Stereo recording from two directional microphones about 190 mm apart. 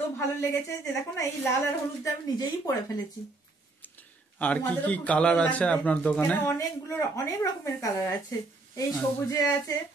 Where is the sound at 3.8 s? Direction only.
10° left (ahead or behind).